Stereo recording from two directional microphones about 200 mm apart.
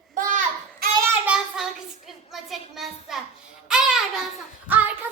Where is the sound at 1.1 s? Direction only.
5° right (ahead or behind).